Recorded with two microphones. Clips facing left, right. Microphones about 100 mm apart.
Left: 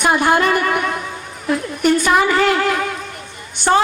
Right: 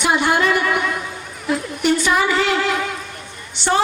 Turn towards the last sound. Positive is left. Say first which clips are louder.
# left 3 dB
turn(degrees=55)  # may be behind; listen again after turning